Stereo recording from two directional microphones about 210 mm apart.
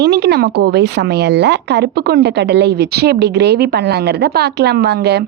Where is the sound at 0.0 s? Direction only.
50° right (ahead or behind).